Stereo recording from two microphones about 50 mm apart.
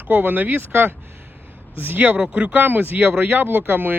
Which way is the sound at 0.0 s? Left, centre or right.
Right.